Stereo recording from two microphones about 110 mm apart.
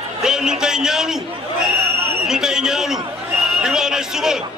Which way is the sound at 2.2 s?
5° right (ahead or behind).